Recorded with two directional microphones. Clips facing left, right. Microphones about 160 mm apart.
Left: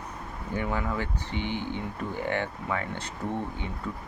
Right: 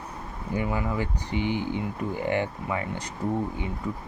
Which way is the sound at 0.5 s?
10° right (ahead or behind).